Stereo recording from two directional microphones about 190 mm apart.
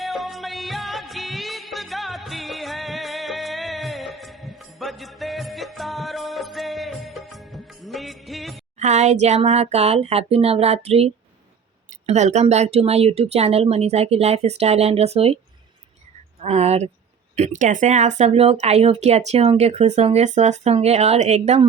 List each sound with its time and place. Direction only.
0.0 s music: centre (ahead or behind)
8.8 s speech: 35° right (ahead or behind)
16.4 s speech: 35° right (ahead or behind)